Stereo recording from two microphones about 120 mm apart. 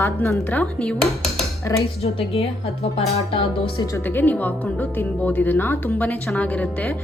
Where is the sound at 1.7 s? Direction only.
25° left (ahead or behind).